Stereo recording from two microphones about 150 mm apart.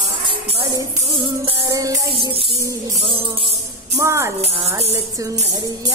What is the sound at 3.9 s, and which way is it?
Female singing, 20° right (ahead or behind).